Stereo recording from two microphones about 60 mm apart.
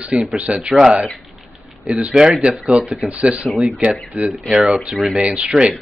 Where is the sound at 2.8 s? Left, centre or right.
Right.